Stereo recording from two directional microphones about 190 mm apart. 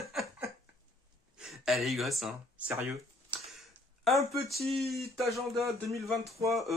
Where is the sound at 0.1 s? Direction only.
Centre (ahead or behind).